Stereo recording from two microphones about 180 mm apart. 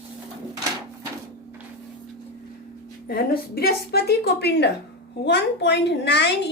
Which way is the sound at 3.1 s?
55° left (ahead or behind).